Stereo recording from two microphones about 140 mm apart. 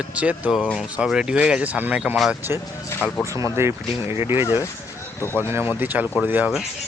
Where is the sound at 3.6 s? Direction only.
20° right (ahead or behind).